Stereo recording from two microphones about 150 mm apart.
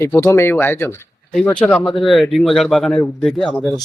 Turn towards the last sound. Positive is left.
turn(degrees=0)  # may be behind; listen again after turning